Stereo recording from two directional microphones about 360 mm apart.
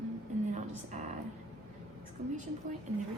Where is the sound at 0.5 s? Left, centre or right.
Centre.